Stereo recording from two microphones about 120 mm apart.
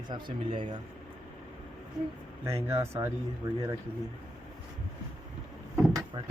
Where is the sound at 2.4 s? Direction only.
25° right (ahead or behind).